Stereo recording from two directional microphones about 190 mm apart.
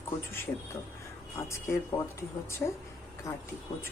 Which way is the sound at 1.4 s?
15° left (ahead or behind).